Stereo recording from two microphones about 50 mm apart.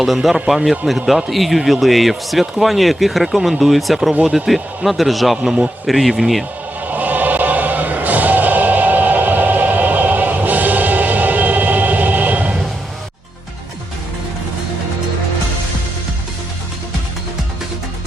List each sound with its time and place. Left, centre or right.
0.0 s a man's voice: centre
4.2 s a man's voice: centre
4.4 s a man's voice: centre
5.4 s a man's voice: centre
5.8 s a man's voice: centre
6.8 s music: right